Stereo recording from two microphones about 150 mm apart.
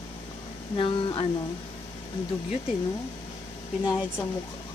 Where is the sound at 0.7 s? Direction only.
35° left (ahead or behind).